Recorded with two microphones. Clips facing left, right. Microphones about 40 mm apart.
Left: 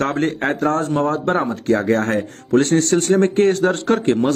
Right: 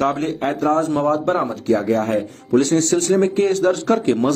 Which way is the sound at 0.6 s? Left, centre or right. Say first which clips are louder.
Right 2 dB; left.